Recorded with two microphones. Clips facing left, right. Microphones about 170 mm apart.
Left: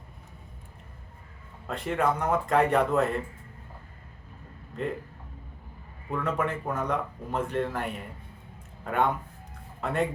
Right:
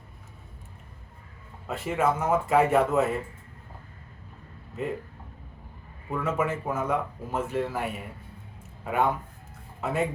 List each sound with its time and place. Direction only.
1.6 s speech: 5° right (ahead or behind)
4.8 s speech: 5° right (ahead or behind)
6.1 s a man's voice: 5° right (ahead or behind)